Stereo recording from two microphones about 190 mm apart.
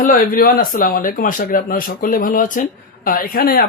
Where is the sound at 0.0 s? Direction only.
50° left (ahead or behind).